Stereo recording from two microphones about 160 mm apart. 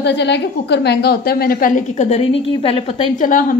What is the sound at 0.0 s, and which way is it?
A woman's voice, 90° left.